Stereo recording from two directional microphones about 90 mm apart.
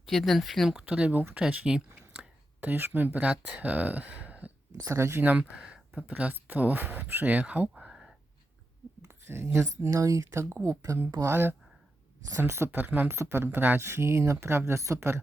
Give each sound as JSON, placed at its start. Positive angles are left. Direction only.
{"t": 0.0, "sound": "speech", "side_deg": 0}
{"t": 0.8, "sound": "speech", "side_deg": -15}
{"t": 4.9, "sound": "speech", "side_deg": -25}
{"t": 7.8, "sound": "a sound", "side_deg": -10}
{"t": 9.0, "sound": "speech", "side_deg": -25}